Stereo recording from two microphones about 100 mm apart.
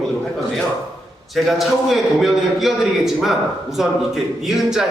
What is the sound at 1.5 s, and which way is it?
A man's voice, centre (ahead or behind).